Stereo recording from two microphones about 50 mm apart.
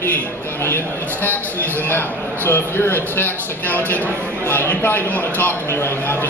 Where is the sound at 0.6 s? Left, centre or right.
Left.